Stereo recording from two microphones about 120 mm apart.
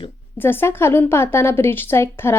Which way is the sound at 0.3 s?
20° left (ahead or behind).